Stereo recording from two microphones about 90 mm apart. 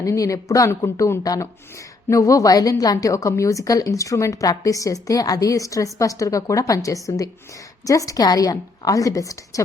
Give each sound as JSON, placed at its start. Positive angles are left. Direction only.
{"t": 0.0, "sound": "a woman's voice", "side_deg": 35}